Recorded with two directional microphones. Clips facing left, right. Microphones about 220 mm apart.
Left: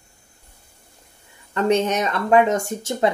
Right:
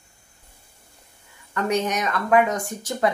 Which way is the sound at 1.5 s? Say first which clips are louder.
Left 4 dB; 25° left (ahead or behind).